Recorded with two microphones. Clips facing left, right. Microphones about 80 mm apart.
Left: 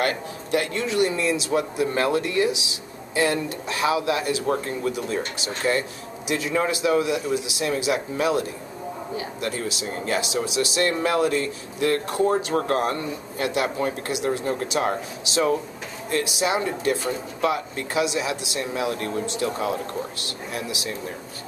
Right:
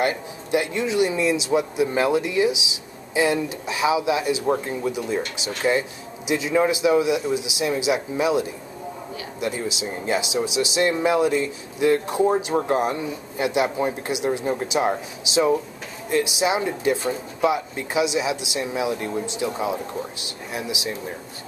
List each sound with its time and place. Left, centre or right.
0.0 s speech: centre